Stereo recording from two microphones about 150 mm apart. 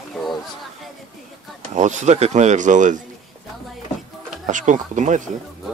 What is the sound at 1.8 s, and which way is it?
Speech, 55° right (ahead or behind).